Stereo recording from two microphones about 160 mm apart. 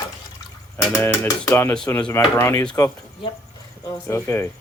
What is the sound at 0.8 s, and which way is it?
Speech, 15° left (ahead or behind).